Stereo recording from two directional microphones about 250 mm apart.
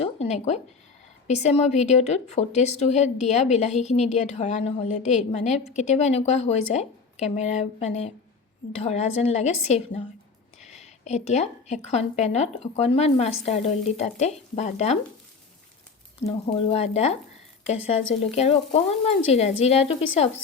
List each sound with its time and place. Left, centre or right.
0.0 s a sound: left
1.3 s a woman's voice: left
16.2 s a woman's voice: left